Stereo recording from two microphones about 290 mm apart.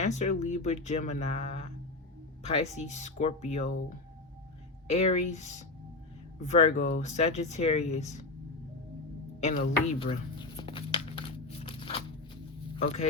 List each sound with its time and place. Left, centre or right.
0.0 s speech: left
9.4 s music: left
12.7 s speech: left